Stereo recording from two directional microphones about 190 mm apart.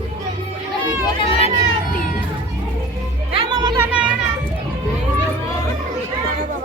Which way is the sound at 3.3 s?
30° right (ahead or behind).